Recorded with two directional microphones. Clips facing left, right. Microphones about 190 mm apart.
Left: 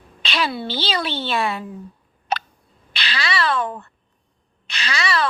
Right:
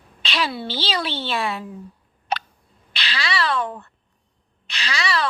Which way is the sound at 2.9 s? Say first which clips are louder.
Left 1 dB; 50° left (ahead or behind).